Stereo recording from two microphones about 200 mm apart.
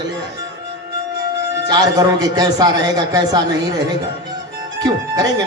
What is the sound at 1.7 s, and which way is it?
Speech, 20° right (ahead or behind).